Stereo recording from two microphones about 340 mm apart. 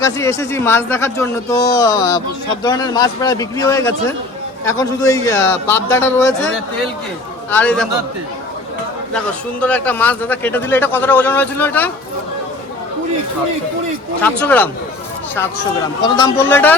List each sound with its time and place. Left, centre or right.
0.0 s a man's voice: centre
7.5 s a man's voice: centre
9.1 s a man's voice: centre
14.2 s a man's voice: centre
16.0 s a man's voice: centre